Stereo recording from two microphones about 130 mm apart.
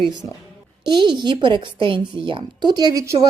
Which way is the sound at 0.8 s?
35° right (ahead or behind).